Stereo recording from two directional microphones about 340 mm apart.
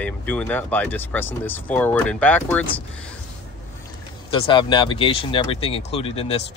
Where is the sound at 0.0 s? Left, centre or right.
Centre.